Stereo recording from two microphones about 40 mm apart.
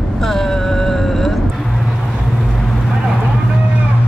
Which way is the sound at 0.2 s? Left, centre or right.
Centre.